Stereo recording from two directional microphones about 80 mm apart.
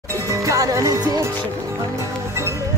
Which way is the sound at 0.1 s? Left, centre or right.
Right.